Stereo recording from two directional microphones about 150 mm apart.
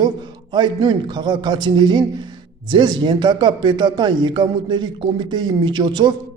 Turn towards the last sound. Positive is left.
turn(degrees=-30)  # may be behind; listen again after turning